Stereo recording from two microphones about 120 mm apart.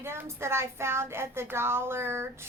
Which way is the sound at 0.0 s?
20° right (ahead or behind).